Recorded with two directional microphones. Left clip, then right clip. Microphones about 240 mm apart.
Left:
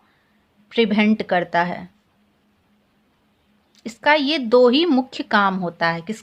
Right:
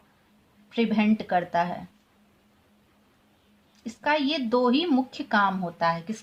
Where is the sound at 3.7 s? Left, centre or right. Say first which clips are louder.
Left 8 dB; left.